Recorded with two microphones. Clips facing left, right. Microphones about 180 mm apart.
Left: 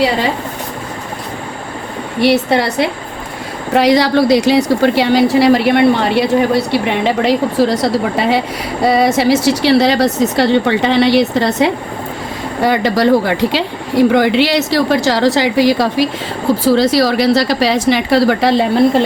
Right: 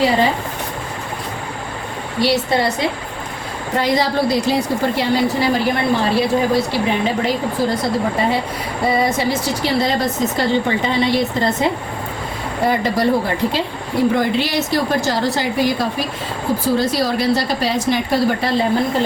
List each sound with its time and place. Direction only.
2.2 s a woman's voice: 70° left (ahead or behind)
3.8 s a woman's voice: 85° left
12.6 s speech: 90° left